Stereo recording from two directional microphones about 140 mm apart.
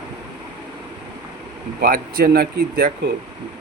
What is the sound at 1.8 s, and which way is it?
Speech, 90° right.